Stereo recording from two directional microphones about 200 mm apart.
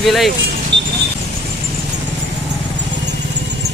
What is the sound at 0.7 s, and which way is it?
Vehicle, 60° right (ahead or behind).